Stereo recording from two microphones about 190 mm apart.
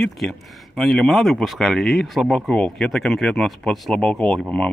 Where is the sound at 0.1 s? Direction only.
Centre (ahead or behind).